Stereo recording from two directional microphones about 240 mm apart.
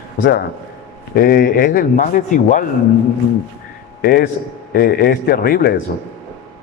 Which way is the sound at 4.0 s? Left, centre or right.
Left.